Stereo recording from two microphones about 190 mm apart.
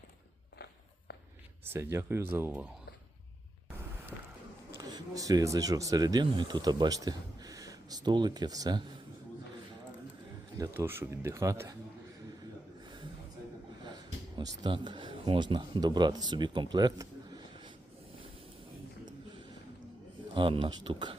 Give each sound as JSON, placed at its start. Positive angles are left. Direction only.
{"t": 1.6, "sound": "speech", "side_deg": -15}
{"t": 4.8, "sound": "speech", "side_deg": -20}
{"t": 10.6, "sound": "speech", "side_deg": -10}
{"t": 13.8, "sound": "speech", "side_deg": -25}
{"t": 20.3, "sound": "speech", "side_deg": -25}